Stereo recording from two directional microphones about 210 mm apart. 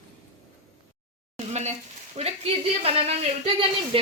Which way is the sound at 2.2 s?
30° right (ahead or behind).